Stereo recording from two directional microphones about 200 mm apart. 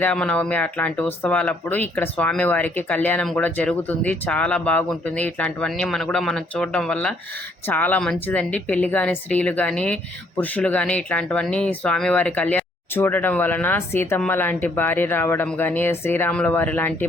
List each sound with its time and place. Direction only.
0.0 s speech: 5° left (ahead or behind)